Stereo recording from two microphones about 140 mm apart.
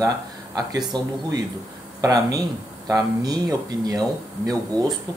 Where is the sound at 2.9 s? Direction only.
25° right (ahead or behind).